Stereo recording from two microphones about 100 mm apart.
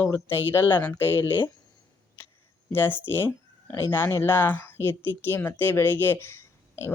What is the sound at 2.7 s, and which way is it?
Speech, 20° left (ahead or behind).